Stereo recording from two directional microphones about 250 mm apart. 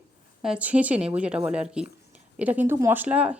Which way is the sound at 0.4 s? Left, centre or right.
Centre.